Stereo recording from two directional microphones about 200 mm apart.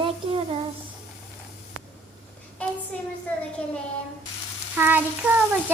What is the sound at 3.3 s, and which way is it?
Speech, 5° left (ahead or behind).